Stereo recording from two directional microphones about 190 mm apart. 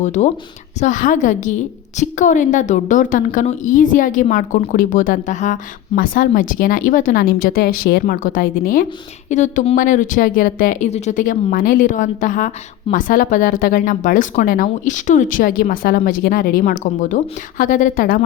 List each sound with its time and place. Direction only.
0.0 s a woman's voice: 40° left (ahead or behind)